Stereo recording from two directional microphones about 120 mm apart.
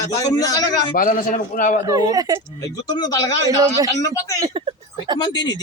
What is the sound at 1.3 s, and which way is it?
Speech, 90° left.